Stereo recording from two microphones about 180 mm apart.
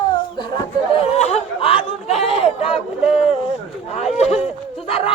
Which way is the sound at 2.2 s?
30° left (ahead or behind).